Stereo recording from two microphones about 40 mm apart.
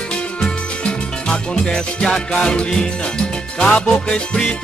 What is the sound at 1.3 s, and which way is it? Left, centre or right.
Music, centre.